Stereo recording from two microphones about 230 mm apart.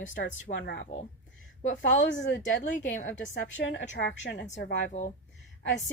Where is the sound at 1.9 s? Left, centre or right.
Left.